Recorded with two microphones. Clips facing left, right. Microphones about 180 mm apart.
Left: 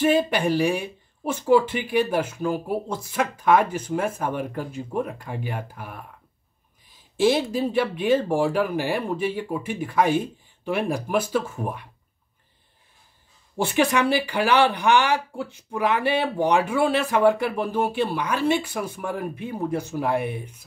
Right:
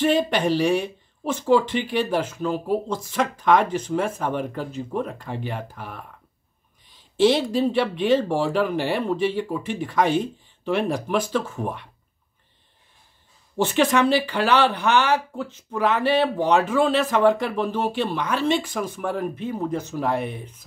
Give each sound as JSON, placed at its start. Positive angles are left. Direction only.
{"t": 0.0, "sound": "speech", "side_deg": 5}
{"t": 7.2, "sound": "speech", "side_deg": 5}
{"t": 13.6, "sound": "speech", "side_deg": 10}